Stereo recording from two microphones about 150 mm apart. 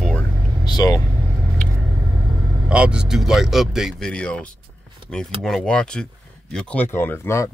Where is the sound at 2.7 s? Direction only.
5° right (ahead or behind).